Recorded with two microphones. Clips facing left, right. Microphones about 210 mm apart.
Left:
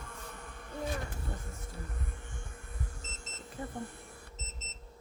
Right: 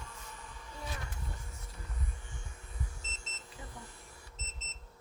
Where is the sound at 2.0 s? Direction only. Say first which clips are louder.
Left 3 dB; 55° left (ahead or behind).